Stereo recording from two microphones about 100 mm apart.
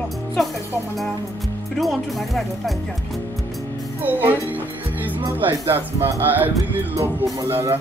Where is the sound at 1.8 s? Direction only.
Centre (ahead or behind).